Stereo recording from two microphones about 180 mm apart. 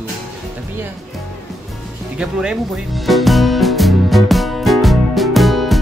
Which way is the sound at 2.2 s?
5° right (ahead or behind).